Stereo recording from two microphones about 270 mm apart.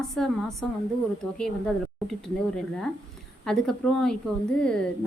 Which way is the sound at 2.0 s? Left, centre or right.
Centre.